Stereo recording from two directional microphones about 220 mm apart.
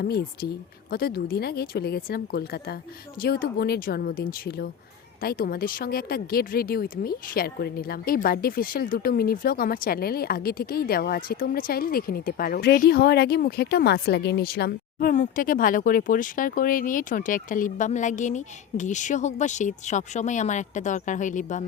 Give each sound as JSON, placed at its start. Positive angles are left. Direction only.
{"t": 0.9, "sound": "speech", "side_deg": 45}